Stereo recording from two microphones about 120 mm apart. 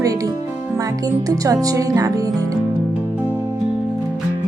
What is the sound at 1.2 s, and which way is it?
Speech, 30° right (ahead or behind).